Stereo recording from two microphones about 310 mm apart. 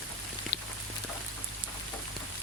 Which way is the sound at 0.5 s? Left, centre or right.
Left.